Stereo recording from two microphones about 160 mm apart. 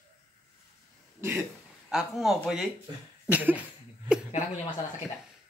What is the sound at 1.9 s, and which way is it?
Speech, 5° right (ahead or behind).